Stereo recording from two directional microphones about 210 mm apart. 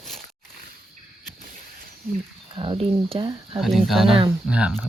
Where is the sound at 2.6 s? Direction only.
25° right (ahead or behind).